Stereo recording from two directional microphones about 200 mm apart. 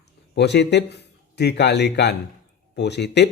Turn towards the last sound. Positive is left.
turn(degrees=55)  # may be behind; listen again after turning